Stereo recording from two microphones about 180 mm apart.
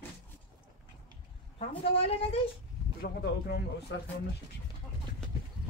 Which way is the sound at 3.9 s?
85° left.